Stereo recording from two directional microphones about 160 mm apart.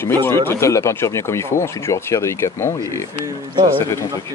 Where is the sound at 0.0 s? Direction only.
15° left (ahead or behind).